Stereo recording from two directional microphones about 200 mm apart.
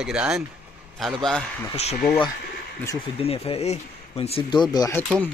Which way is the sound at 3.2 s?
30° left (ahead or behind).